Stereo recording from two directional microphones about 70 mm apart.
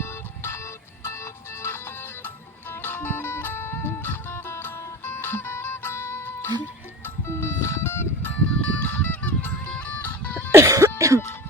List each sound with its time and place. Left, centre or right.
0.0 s music: left
8.7 s honk: left
9.7 s music: left
10.5 s cough: right